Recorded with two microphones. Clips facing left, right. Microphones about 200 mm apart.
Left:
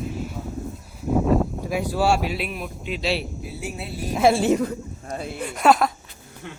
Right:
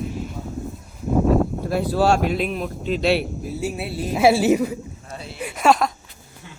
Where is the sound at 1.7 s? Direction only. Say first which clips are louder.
Right 2 dB; 10° left (ahead or behind).